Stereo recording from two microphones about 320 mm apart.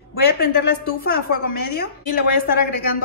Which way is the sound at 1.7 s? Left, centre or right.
Left.